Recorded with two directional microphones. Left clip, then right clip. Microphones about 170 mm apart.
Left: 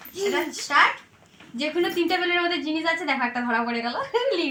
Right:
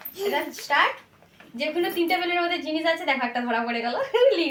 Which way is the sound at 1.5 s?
25° right (ahead or behind).